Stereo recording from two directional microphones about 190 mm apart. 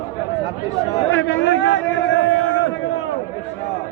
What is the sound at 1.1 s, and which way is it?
A man's voice, 75° left (ahead or behind).